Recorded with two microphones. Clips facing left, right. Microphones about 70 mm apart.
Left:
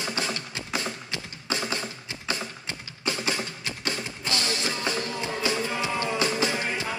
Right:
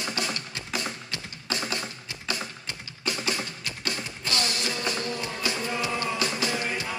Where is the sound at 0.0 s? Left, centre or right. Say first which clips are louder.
Left 1 dB; left.